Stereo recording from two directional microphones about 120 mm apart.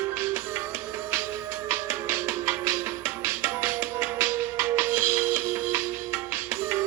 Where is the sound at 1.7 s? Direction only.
20° right (ahead or behind).